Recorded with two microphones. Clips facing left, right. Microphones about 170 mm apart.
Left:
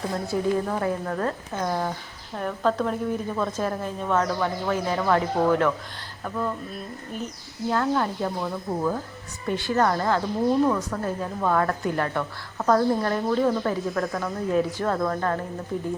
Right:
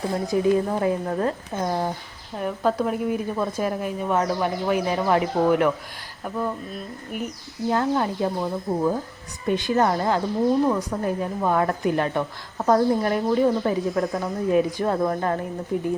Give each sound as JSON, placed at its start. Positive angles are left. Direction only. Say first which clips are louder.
{"t": 0.3, "sound": "a woman's voice", "louder": "right 4 dB", "side_deg": -20}
{"t": 7.7, "sound": "a woman's voice", "louder": "right 1 dB", "side_deg": -20}